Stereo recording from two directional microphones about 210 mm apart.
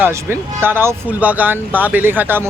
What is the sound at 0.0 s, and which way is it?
Speech, 10° right (ahead or behind).